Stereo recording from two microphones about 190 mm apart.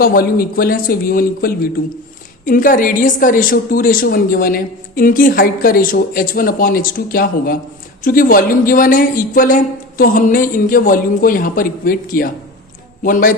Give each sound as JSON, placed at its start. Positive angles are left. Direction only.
{"t": 0.0, "sound": "a woman's voice", "side_deg": 50}